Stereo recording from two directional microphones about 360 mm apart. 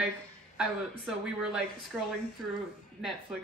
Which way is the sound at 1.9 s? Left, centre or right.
Centre.